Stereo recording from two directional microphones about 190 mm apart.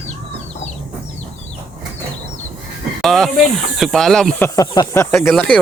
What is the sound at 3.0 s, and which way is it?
Speech, centre (ahead or behind).